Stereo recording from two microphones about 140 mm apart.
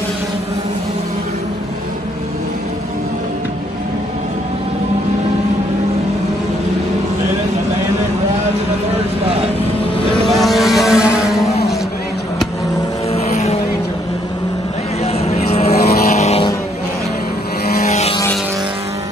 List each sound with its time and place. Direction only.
10.2 s vehicle: centre (ahead or behind)
13.1 s vehicle: 50° left (ahead or behind)
15.1 s vehicle: 50° left (ahead or behind)
17.8 s vehicle: 55° left (ahead or behind)